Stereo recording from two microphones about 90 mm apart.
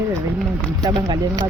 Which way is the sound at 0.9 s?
60° right (ahead or behind).